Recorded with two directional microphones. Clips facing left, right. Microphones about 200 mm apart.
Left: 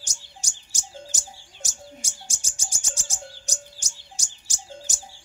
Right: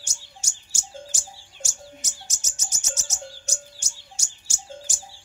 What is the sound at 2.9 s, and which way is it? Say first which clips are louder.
Chirp: right 3 dB; 30° left (ahead or behind).